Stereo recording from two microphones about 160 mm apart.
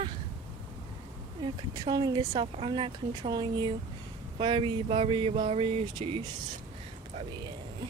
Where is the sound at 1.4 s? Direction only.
25° right (ahead or behind).